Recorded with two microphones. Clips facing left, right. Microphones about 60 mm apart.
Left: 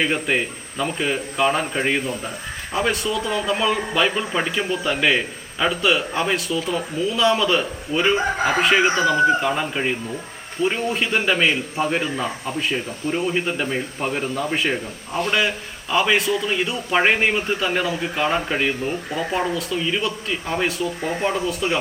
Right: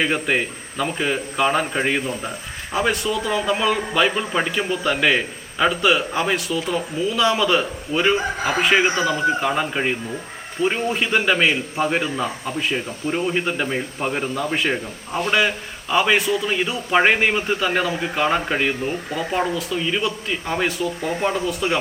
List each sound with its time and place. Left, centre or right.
0.0 s a man's voice: centre